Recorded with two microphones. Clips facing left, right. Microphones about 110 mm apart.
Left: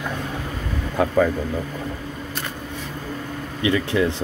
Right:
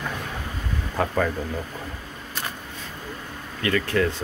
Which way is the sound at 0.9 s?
5° left (ahead or behind).